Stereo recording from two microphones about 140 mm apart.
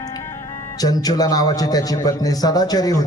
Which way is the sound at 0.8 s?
25° left (ahead or behind).